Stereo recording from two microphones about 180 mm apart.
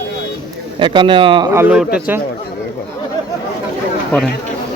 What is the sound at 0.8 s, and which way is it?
Speech, 25° right (ahead or behind).